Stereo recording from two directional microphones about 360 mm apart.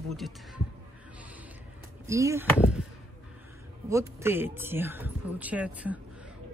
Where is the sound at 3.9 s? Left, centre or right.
Centre.